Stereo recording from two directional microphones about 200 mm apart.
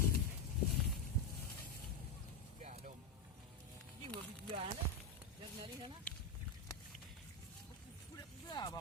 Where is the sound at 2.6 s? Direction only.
35° right (ahead or behind).